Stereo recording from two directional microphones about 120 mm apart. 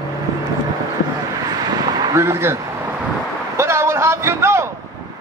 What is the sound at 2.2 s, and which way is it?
Speech, 25° right (ahead or behind).